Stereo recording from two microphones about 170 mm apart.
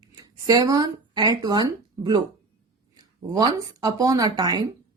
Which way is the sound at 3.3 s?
20° right (ahead or behind).